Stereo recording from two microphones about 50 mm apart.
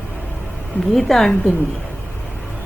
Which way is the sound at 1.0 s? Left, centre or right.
Centre.